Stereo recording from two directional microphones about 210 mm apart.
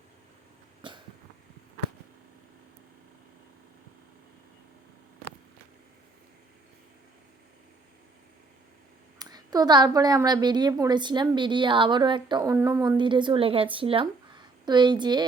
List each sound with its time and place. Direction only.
0.8 s cough: 25° right (ahead or behind)
9.1 s a woman's voice: 20° right (ahead or behind)